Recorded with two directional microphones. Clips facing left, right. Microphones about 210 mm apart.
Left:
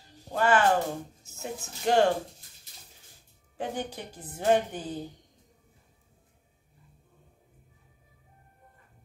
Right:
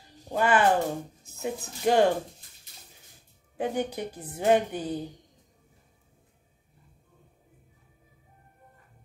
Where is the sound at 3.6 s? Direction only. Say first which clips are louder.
Right 5 dB; 15° right (ahead or behind).